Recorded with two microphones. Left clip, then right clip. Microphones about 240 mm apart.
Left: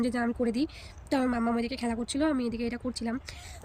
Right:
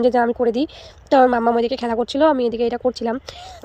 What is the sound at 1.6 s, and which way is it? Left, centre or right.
Speech, centre.